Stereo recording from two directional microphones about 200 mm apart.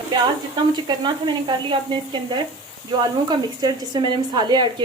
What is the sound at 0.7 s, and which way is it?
A woman's voice, 20° right (ahead or behind).